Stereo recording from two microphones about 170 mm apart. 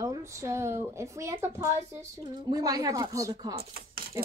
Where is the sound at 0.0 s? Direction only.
20° right (ahead or behind).